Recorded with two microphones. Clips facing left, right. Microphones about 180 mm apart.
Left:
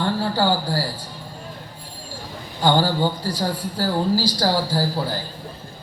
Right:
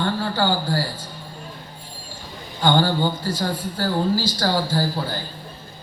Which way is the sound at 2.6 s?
10° left (ahead or behind).